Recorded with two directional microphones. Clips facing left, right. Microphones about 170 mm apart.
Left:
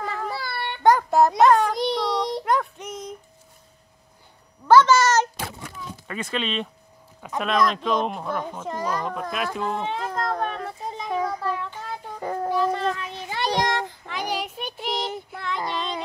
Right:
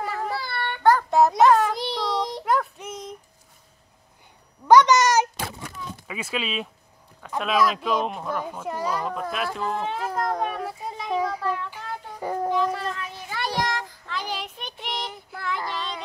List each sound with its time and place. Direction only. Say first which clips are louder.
0.0 s child singing: right 1 dB; 5° right (ahead or behind)
0.7 s child singing: left 1 dB; 15° left (ahead or behind)
1.1 s child singing: right 1 dB; centre (ahead or behind)
4.6 s speech: even; 15° right (ahead or behind)
9.1 s a sound: even; centre (ahead or behind)
13.1 s child singing: left 4 dB; 20° left (ahead or behind)
14.3 s child singing: left 4 dB; 10° left (ahead or behind)
15.3 s child singing: even; 5° right (ahead or behind)
15.6 s child singing: left 3 dB; 25° left (ahead or behind)